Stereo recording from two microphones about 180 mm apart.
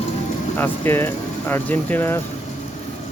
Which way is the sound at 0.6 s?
10° left (ahead or behind).